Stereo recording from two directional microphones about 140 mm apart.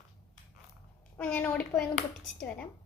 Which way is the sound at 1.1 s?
15° left (ahead or behind).